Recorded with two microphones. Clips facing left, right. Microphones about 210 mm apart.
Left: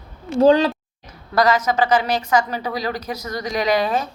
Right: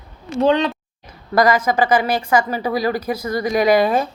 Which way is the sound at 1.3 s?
10° right (ahead or behind).